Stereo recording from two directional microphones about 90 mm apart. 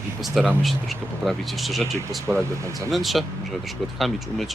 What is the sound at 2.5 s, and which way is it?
Speech, 35° right (ahead or behind).